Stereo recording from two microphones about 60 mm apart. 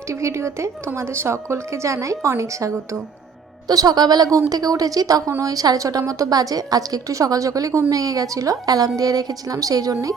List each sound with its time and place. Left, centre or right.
0.1 s a woman's voice: right
3.7 s a woman's voice: right
5.4 s a woman's voice: right